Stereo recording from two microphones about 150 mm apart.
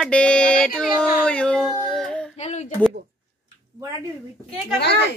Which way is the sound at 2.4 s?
50° left (ahead or behind).